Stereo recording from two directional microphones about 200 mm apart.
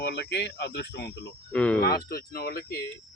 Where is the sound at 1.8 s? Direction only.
50° left (ahead or behind).